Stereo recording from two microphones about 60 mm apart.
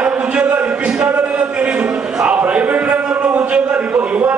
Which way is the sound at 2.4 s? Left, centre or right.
Right.